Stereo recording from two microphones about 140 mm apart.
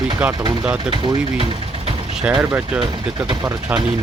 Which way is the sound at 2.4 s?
15° right (ahead or behind).